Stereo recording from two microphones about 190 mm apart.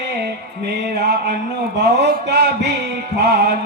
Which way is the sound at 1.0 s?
60° right (ahead or behind).